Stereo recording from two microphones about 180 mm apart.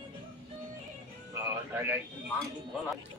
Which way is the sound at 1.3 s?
10° right (ahead or behind).